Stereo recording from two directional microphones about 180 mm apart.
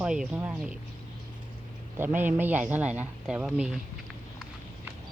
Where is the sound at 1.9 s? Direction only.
10° right (ahead or behind).